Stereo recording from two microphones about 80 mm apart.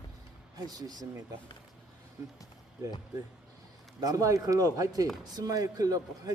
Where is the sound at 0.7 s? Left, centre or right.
Right.